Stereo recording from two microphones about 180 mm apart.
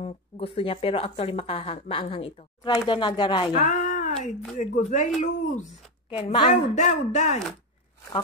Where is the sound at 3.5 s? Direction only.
45° left (ahead or behind).